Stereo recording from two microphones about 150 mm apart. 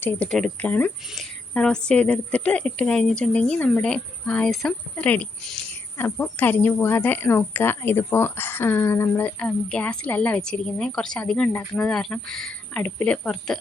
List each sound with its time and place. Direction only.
0.0 s speech: 10° left (ahead or behind)